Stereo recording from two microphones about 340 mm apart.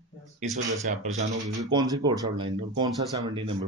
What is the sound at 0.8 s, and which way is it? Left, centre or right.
Speech, right.